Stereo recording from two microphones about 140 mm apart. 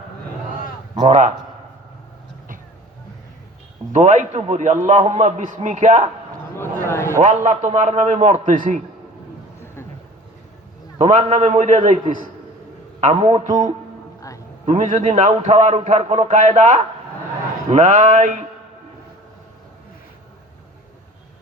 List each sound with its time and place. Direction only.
1.0 s a man's voice: 60° right (ahead or behind)
3.9 s a man's voice: 60° right (ahead or behind)
6.6 s a sound: 20° left (ahead or behind)
7.2 s a man's voice: 55° right (ahead or behind)
10.9 s a man's voice: 55° right (ahead or behind)
14.2 s a sound: 25° left (ahead or behind)
14.7 s a man's voice: 60° right (ahead or behind)